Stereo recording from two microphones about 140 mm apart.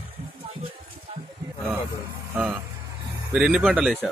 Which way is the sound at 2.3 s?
10° right (ahead or behind).